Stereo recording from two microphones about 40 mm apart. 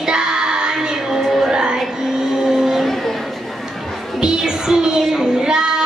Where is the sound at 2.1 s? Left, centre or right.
Centre.